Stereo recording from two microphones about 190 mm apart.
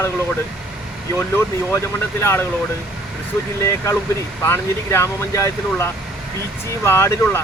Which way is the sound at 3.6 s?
15° left (ahead or behind).